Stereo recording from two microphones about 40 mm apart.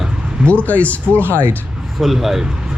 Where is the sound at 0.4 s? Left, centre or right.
Left.